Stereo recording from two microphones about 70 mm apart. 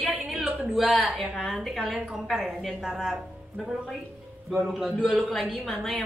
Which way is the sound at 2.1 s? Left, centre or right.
Centre.